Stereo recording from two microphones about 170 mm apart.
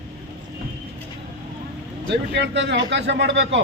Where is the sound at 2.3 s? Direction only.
90° right.